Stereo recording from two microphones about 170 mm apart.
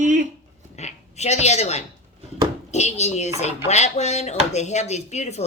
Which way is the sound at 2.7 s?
40° left (ahead or behind).